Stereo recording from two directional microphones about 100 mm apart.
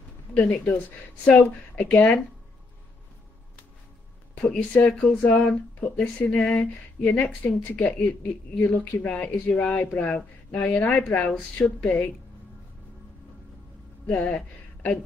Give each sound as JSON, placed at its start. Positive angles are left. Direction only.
{"t": 0.3, "sound": "speech", "side_deg": 15}
{"t": 4.4, "sound": "speech", "side_deg": 10}
{"t": 14.0, "sound": "speech", "side_deg": 15}